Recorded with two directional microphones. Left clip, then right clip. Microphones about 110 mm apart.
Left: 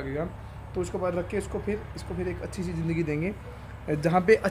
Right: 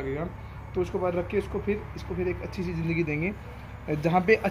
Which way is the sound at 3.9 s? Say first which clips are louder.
Left 1 dB; 45° left (ahead or behind).